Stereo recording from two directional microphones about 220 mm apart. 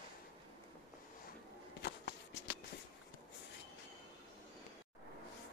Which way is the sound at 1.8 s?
55° left (ahead or behind).